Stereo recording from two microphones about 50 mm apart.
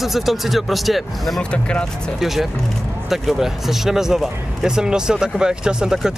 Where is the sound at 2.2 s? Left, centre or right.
Centre.